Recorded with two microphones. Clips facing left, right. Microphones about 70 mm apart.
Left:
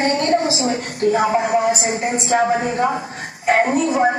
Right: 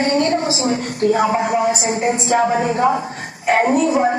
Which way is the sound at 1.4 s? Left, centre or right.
Left.